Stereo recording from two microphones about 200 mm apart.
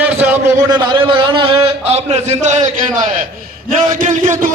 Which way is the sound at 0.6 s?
20° right (ahead or behind).